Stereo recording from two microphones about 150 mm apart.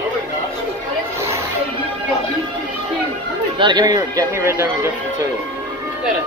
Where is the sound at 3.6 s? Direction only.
30° right (ahead or behind).